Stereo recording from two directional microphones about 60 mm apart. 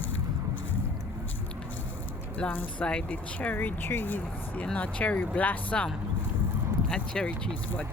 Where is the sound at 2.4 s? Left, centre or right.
Centre.